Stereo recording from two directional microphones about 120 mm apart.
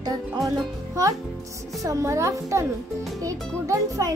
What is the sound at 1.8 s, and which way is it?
A child's voice, 25° right (ahead or behind).